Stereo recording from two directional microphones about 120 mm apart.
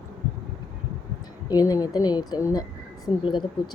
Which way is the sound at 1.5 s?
30° left (ahead or behind).